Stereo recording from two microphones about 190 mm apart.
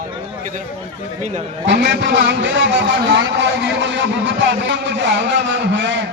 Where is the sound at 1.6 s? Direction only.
65° right (ahead or behind).